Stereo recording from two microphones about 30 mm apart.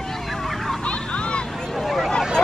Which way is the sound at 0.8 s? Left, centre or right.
Left.